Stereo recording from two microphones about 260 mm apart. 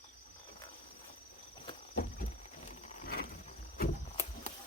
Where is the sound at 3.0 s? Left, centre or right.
Left.